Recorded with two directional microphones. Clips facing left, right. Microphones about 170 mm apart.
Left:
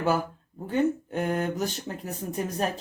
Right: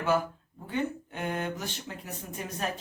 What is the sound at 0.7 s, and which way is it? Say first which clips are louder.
Speech: left 7 dB; 40° left (ahead or behind).